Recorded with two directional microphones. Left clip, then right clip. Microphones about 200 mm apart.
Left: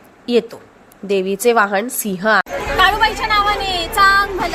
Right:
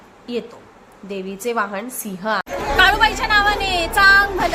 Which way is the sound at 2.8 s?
30° right (ahead or behind).